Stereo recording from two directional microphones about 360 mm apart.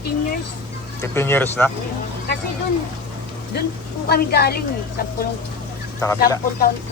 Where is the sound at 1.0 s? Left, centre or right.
Centre.